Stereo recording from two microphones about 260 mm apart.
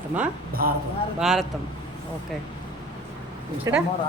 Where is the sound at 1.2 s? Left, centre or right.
Centre.